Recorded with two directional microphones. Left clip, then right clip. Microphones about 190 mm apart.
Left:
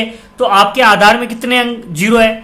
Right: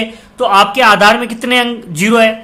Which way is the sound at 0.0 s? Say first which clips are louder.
Even; 10° right (ahead or behind).